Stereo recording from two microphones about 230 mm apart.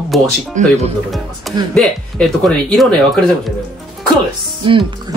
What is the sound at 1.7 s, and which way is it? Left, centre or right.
Speech, centre.